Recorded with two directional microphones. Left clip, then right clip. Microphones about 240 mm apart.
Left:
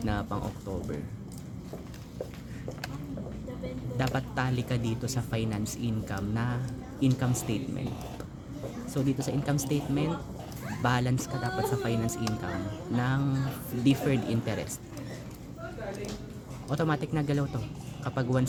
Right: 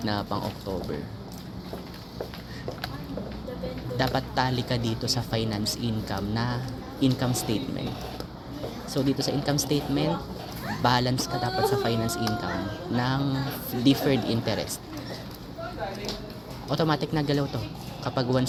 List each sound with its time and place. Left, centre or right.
0.0 s speech: centre
3.9 s speech: centre
8.9 s speech: centre
16.6 s speech: centre